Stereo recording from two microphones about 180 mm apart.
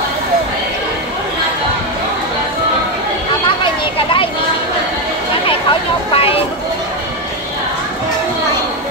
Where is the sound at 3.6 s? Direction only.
30° left (ahead or behind).